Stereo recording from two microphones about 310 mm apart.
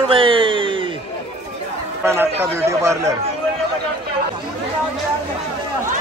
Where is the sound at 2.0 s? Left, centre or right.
Centre.